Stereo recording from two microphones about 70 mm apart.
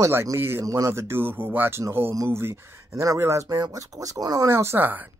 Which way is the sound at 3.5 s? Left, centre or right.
Right.